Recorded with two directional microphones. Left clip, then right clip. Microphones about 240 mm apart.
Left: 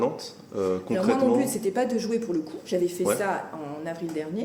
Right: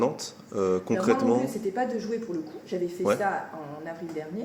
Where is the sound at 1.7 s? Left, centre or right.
Left.